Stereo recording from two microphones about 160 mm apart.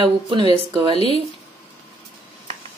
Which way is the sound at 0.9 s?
40° left (ahead or behind).